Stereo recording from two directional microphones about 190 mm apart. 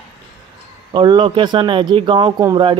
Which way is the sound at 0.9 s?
25° right (ahead or behind).